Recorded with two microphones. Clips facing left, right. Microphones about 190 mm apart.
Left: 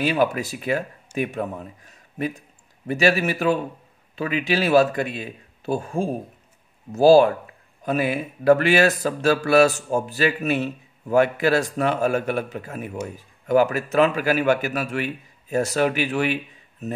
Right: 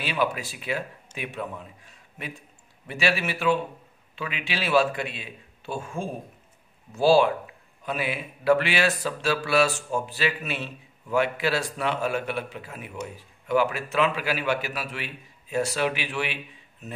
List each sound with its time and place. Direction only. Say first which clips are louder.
0.0 s a man's voice: left 6 dB; 45° left (ahead or behind)